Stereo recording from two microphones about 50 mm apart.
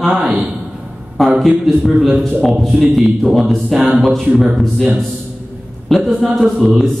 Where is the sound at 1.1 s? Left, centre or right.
Centre.